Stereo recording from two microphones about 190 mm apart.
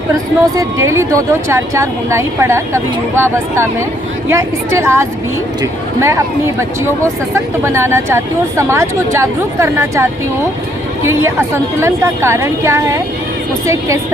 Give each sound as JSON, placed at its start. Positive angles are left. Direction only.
{"t": 0.1, "sound": "speech", "side_deg": -20}